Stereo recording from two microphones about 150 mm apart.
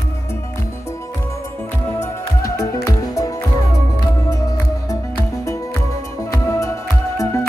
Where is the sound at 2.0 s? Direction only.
20° left (ahead or behind).